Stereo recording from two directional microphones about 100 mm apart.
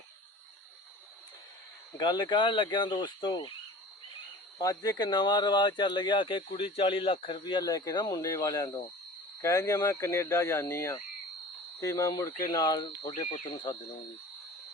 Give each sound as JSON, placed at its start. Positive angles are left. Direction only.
{"t": 2.0, "sound": "speech", "side_deg": 45}
{"t": 4.5, "sound": "speech", "side_deg": 40}
{"t": 6.5, "sound": "speech", "side_deg": 65}
{"t": 7.6, "sound": "speech", "side_deg": 35}